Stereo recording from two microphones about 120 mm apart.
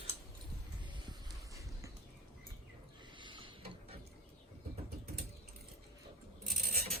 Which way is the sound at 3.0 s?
40° right (ahead or behind).